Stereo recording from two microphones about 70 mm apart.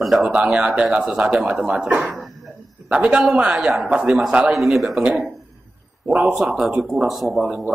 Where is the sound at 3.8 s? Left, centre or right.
Centre.